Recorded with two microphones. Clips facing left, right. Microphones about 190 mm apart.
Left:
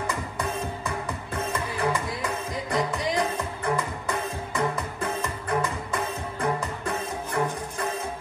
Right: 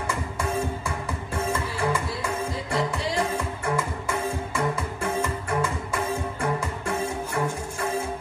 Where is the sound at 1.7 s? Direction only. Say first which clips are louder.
Even; 20° left (ahead or behind).